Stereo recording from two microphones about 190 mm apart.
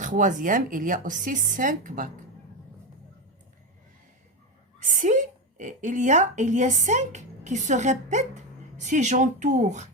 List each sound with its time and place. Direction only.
0.0 s speech: 40° right (ahead or behind)
4.8 s a woman's voice: 40° right (ahead or behind)